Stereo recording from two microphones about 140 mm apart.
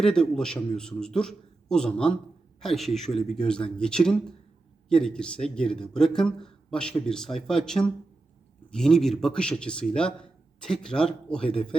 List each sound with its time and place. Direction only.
0.0 s speech: 5° left (ahead or behind)